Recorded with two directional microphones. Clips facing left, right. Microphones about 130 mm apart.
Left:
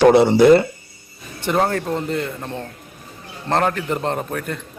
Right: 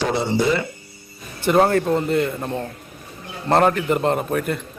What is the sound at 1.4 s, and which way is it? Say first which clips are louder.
A man's voice: right 3 dB; 5° right (ahead or behind).